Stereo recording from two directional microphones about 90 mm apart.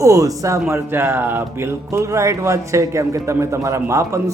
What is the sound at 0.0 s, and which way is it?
Speech, 40° right (ahead or behind).